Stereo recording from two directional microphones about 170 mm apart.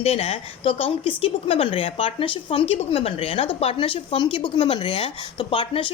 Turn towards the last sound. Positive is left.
turn(degrees=30)  # may be behind; listen again after turning